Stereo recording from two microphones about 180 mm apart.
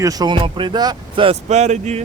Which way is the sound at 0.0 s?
20° right (ahead or behind).